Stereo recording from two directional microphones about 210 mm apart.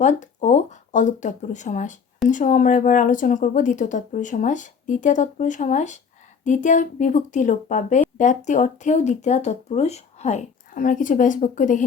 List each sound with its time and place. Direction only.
0.0 s speech: 35° left (ahead or behind)